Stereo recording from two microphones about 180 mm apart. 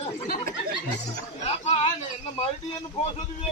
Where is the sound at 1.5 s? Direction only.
35° left (ahead or behind).